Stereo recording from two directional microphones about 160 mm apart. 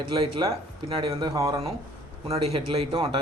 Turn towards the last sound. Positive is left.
turn(degrees=-35)  # may be behind; listen again after turning